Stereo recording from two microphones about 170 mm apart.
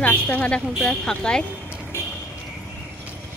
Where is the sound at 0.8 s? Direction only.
5° left (ahead or behind).